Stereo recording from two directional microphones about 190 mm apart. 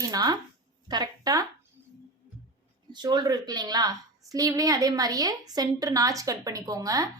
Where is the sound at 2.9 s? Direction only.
20° right (ahead or behind).